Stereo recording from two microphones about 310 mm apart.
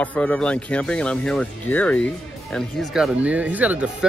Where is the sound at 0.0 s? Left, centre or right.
Centre.